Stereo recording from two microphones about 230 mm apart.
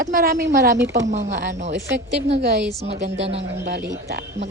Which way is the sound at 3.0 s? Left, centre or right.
Right.